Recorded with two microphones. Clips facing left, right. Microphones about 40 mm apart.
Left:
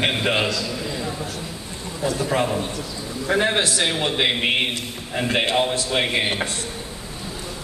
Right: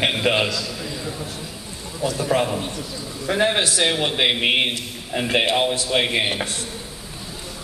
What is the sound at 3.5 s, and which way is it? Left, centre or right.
Speech, centre.